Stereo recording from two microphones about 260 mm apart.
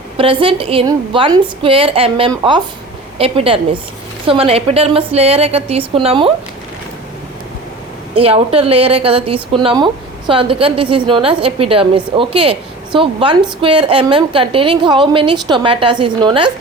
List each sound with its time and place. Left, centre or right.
0.2 s a woman's voice: centre
8.1 s a woman's voice: right